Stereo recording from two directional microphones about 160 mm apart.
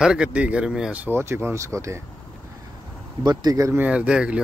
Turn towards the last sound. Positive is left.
turn(degrees=-5)  # may be behind; listen again after turning